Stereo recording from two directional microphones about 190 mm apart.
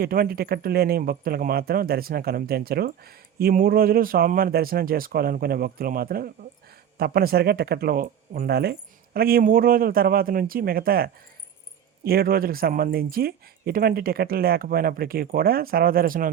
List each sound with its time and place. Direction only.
0.0 s speech: 50° right (ahead or behind)